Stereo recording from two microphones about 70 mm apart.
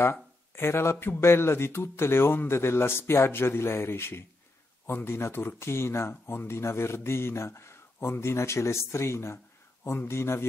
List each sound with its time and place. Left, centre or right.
0.0 s speech: left